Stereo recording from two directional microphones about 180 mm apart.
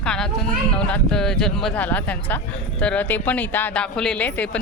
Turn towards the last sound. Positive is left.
turn(degrees=10)  # may be behind; listen again after turning